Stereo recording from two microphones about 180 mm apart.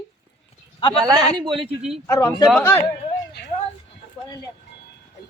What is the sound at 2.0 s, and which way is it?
Speech, 20° left (ahead or behind).